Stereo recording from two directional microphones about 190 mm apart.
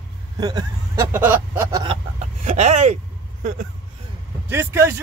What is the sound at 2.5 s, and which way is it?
Speech, 40° right (ahead or behind).